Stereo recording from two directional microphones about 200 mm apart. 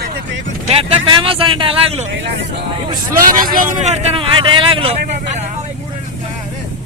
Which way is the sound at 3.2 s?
45° right (ahead or behind).